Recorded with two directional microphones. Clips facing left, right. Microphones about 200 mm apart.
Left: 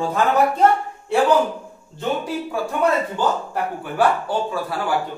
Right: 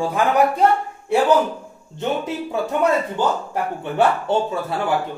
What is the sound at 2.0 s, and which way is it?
Speech, 20° right (ahead or behind).